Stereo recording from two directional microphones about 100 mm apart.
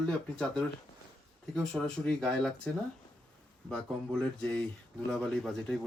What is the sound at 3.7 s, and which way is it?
Speech, 5° left (ahead or behind).